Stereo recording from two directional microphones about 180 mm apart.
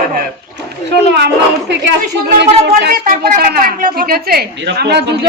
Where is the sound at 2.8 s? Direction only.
55° right (ahead or behind).